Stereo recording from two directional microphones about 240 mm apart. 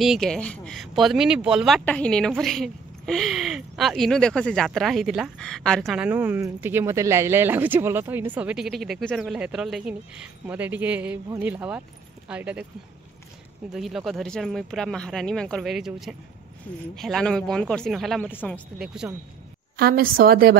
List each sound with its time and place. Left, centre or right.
0.0 s speech: centre
13.7 s speech: centre
19.8 s a woman's voice: right